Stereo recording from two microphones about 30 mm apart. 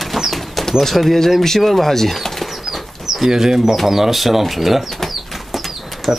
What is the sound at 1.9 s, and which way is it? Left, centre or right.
Speech, centre.